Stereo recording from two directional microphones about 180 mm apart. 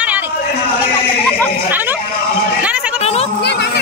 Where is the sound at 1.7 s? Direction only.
10° right (ahead or behind).